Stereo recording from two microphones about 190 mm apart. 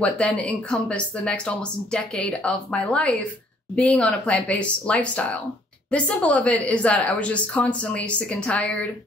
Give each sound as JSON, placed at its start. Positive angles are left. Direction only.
{"t": 0.0, "sound": "a woman's voice", "side_deg": 5}